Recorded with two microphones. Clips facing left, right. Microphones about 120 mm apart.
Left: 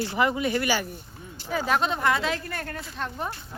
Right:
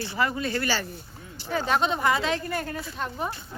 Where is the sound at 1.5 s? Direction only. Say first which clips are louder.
Even; 5° left (ahead or behind).